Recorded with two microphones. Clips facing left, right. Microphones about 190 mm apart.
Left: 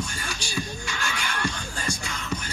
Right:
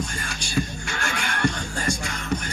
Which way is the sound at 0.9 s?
55° right (ahead or behind).